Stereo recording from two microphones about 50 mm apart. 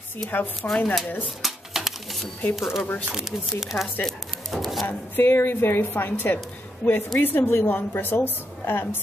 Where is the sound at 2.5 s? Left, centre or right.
Centre.